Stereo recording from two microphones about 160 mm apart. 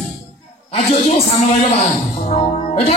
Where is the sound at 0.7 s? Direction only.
40° left (ahead or behind).